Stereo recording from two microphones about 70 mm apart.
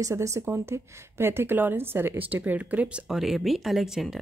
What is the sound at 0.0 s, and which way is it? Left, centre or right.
Speech, right.